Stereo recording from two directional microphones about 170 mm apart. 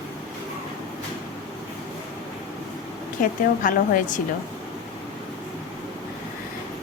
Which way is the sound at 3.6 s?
50° left (ahead or behind).